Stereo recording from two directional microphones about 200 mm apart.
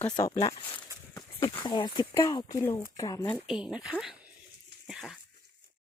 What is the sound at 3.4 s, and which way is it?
Speech, 5° right (ahead or behind).